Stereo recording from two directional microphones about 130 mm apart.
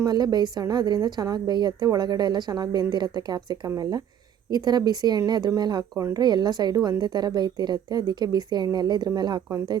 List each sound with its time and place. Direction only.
0.0 s a woman's voice: 30° right (ahead or behind)